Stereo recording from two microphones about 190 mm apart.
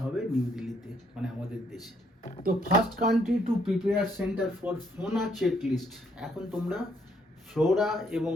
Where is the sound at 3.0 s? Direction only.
50° right (ahead or behind).